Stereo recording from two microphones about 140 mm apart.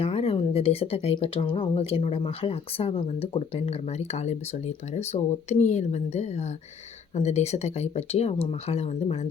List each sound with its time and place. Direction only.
0.0 s speech: 45° left (ahead or behind)